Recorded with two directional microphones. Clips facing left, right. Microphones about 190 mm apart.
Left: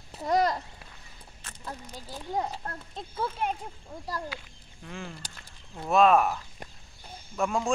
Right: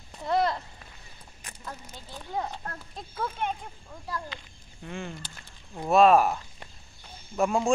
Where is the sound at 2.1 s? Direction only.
10° left (ahead or behind).